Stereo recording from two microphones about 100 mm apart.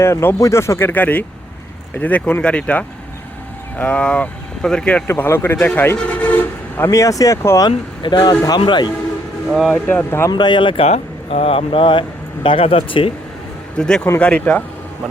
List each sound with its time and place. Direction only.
0.0 s speech: 25° left (ahead or behind); by 5.0 s 5° left (ahead or behind)
5.0 s speech: 25° left (ahead or behind)
8.0 s speech: 45° left (ahead or behind)
9.5 s speech: centre (ahead or behind)
9.8 s speech: 20° left (ahead or behind)
10.3 s speech: 50° left (ahead or behind); by 13.1 s 65° left (ahead or behind)
13.7 s speech: 10° left (ahead or behind)